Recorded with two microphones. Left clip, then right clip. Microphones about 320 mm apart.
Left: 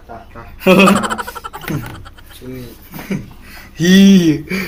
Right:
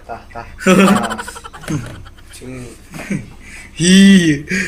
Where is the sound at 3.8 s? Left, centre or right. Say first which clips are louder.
Even; centre.